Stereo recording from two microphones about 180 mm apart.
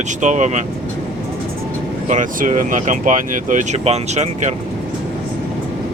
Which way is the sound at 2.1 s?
45° right (ahead or behind).